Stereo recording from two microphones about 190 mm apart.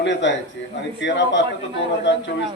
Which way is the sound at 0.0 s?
70° left (ahead or behind).